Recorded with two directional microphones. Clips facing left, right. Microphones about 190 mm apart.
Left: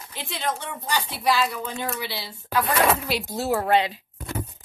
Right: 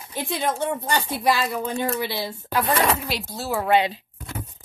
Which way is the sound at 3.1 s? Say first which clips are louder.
Left 3 dB; 15° left (ahead or behind).